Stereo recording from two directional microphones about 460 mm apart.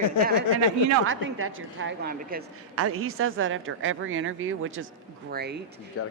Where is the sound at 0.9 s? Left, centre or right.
Right.